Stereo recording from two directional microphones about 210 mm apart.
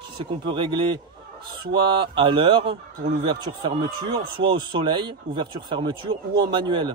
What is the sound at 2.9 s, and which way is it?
Speech, 45° right (ahead or behind).